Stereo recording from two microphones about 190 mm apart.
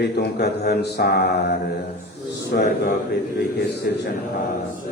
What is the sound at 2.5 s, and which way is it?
Speech, 55° left (ahead or behind).